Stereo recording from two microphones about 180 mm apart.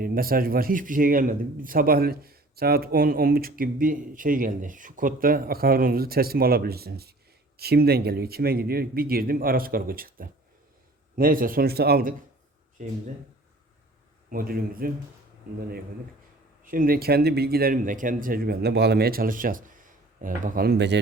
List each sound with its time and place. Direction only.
0.0 s a man's voice: 55° right (ahead or behind)
12.8 s speech: 45° right (ahead or behind)
14.3 s speech: 55° right (ahead or behind)
16.6 s a man's voice: 50° right (ahead or behind); by 21.0 s 70° right (ahead or behind)